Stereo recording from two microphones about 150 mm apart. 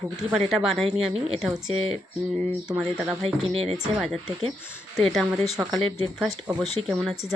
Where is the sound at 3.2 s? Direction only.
45° right (ahead or behind).